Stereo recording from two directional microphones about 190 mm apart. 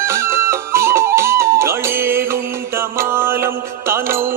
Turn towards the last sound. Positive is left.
turn(degrees=-15)  # may be behind; listen again after turning